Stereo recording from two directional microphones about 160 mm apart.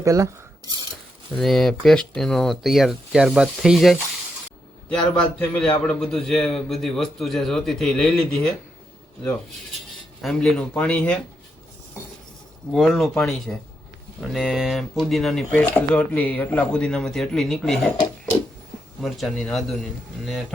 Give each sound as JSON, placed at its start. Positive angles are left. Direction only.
{"t": 0.0, "sound": "speech", "side_deg": -20}
{"t": 1.4, "sound": "a man's voice", "side_deg": 0}
{"t": 10.2, "sound": "a man's voice", "side_deg": 0}
{"t": 12.7, "sound": "a man's voice", "side_deg": 0}
{"t": 19.0, "sound": "a man's voice", "side_deg": 0}